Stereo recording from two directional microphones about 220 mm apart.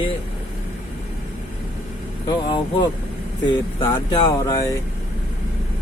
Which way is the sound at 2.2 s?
20° left (ahead or behind).